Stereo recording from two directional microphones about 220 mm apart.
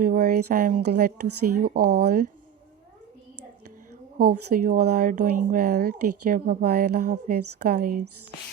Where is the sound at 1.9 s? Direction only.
45° right (ahead or behind).